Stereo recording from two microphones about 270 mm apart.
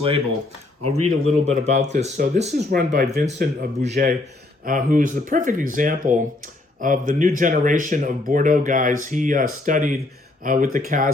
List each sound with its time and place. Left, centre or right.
0.9 s speech: right
1.3 s speech: right